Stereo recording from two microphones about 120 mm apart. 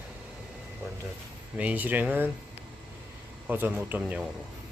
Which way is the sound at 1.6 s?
15° right (ahead or behind).